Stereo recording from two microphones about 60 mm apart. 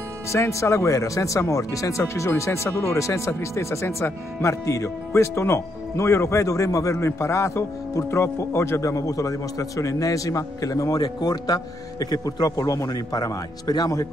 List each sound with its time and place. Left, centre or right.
0.3 s speech: left